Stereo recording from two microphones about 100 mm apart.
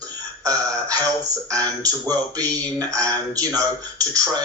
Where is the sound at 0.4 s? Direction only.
35° right (ahead or behind).